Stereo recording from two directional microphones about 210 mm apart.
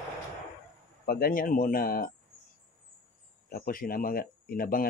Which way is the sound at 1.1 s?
45° left (ahead or behind).